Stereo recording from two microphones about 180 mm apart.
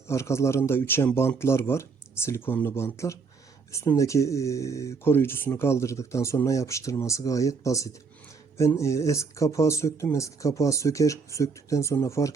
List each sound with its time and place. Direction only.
0.1 s speech: 15° left (ahead or behind)